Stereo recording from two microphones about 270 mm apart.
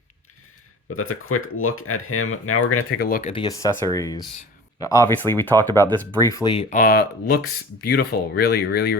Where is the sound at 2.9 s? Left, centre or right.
Left.